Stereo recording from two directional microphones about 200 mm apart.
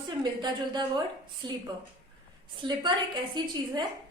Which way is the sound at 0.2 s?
20° right (ahead or behind).